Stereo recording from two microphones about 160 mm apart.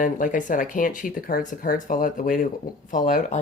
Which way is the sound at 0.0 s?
55° left (ahead or behind).